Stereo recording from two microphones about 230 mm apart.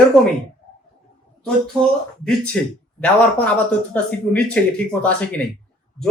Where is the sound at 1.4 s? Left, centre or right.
Centre.